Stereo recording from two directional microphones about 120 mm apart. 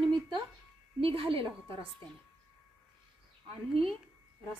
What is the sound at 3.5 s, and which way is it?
Speech, 50° right (ahead or behind).